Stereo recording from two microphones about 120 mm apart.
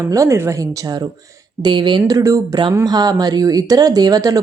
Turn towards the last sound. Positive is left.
turn(degrees=-30)  # may be behind; listen again after turning